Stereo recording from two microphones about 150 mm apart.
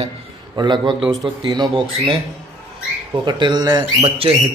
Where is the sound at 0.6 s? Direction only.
30° right (ahead or behind).